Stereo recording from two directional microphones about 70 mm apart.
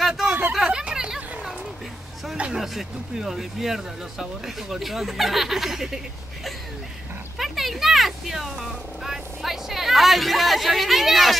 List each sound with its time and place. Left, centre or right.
0.0 s hubbub: centre
0.5 s a sound: centre
2.6 s speech: centre
7.3 s speech: centre